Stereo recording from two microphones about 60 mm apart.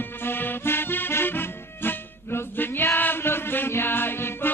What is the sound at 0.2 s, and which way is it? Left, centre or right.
Music, left.